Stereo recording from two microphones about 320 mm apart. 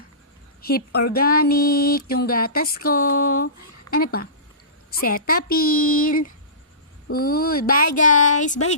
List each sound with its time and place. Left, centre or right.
0.6 s speech: left